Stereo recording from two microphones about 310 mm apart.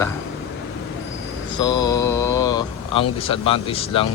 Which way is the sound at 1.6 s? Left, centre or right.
Centre.